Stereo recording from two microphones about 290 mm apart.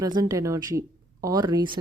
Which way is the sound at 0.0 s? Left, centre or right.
Centre.